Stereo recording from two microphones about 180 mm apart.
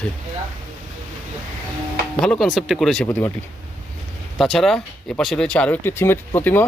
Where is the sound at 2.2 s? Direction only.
Centre (ahead or behind).